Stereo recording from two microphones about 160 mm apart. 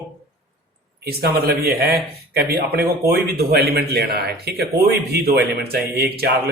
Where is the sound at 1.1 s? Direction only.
75° right (ahead or behind).